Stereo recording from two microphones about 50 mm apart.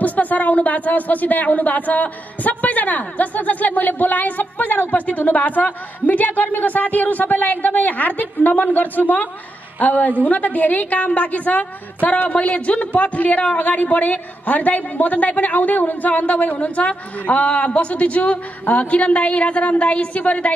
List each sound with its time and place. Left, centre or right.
0.0 s a woman's voice: left